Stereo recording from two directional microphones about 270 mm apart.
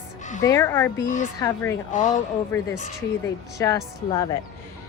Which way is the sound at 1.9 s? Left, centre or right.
Left.